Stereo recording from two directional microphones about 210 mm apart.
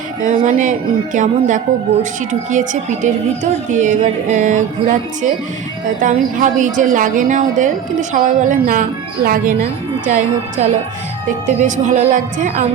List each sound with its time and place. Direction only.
0.2 s speech: 35° right (ahead or behind)
6.0 s speech: 40° right (ahead or behind)
11.4 s speech: 35° right (ahead or behind)